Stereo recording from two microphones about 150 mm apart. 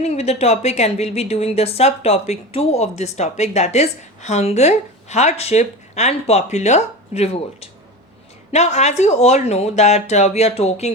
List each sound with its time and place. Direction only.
0.0 s a woman's voice: 45° left (ahead or behind)